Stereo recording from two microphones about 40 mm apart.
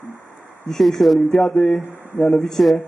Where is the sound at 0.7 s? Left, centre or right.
Centre.